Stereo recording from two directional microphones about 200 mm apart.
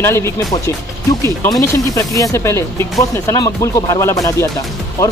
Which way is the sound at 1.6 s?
15° left (ahead or behind).